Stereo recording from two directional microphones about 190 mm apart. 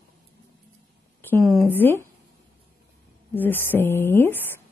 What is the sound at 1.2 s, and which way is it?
Speech, 10° left (ahead or behind).